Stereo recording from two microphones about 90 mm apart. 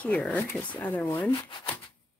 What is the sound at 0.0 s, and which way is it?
Speech, 15° left (ahead or behind).